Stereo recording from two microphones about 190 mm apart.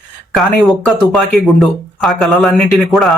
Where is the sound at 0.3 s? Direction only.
Centre (ahead or behind).